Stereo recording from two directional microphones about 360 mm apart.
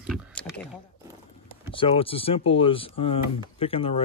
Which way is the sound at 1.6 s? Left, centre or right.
Centre.